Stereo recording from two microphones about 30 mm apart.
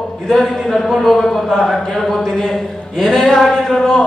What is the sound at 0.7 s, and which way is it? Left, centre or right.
A man's voice, centre.